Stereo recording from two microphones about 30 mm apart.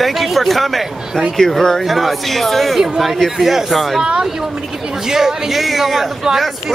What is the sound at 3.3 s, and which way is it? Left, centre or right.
Speech, centre.